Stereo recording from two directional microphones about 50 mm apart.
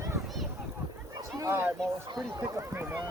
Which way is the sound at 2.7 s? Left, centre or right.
Right.